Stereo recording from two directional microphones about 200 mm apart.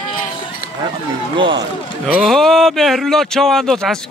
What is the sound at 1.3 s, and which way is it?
Speech, 25° right (ahead or behind).